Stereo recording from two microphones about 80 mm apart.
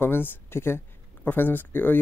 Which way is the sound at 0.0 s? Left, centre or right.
Left.